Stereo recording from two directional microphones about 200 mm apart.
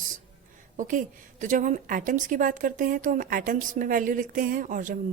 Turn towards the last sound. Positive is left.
turn(degrees=-40)  # may be behind; listen again after turning